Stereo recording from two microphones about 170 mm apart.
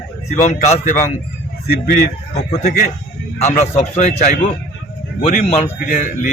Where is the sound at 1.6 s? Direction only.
65° left (ahead or behind).